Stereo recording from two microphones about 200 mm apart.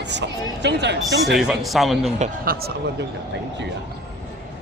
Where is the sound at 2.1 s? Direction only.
35° right (ahead or behind).